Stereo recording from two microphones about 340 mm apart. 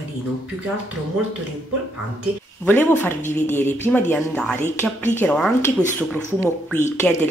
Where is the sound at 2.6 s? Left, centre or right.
Centre.